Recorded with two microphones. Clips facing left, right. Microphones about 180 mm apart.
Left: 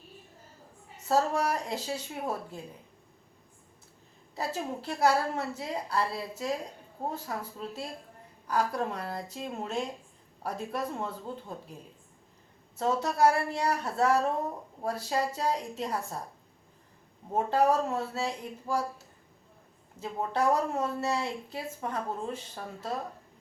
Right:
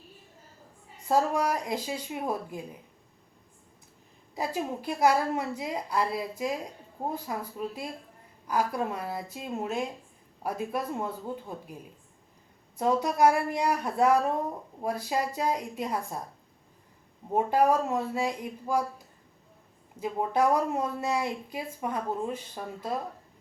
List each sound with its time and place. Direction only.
1.0 s speech: 10° right (ahead or behind)
4.4 s speech: 10° right (ahead or behind)
12.7 s speech: 15° right (ahead or behind)
17.3 s speech: 10° right (ahead or behind)